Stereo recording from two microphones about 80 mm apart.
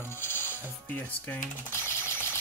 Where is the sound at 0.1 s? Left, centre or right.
Left.